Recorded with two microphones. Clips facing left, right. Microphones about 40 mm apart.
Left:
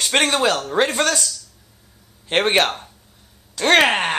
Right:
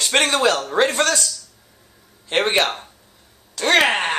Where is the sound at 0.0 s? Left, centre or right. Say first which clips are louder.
Even; centre.